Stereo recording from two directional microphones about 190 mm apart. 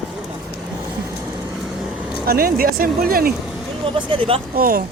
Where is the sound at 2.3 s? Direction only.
50° right (ahead or behind).